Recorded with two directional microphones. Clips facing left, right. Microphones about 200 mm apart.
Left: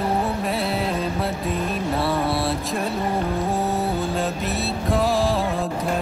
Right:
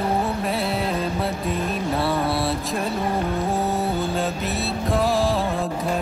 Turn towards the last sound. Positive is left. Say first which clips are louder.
# even
turn(degrees=0)  # may be behind; listen again after turning